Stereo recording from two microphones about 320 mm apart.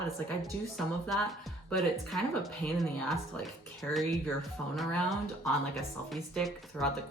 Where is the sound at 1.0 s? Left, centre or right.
Centre.